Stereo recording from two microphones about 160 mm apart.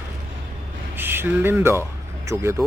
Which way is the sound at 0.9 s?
15° right (ahead or behind).